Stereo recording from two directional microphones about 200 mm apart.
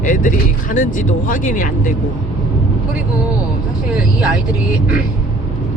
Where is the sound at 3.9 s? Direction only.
5° right (ahead or behind).